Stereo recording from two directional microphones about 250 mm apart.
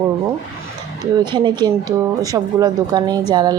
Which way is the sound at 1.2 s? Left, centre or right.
Centre.